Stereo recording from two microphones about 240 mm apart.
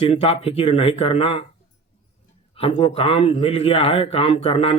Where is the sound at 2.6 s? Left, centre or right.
Left.